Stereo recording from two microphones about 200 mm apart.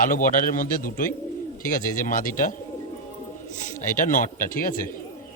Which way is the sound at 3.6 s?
40° left (ahead or behind).